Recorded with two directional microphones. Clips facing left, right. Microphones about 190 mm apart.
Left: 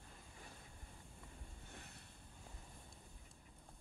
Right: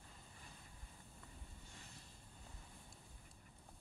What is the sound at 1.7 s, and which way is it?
Vehicle, 60° left (ahead or behind).